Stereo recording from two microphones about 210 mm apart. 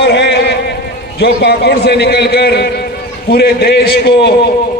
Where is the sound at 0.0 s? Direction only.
55° left (ahead or behind).